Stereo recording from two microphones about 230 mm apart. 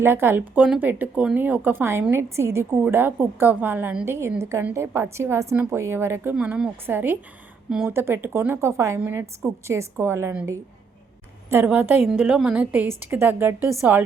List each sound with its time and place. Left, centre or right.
0.0 s speech: centre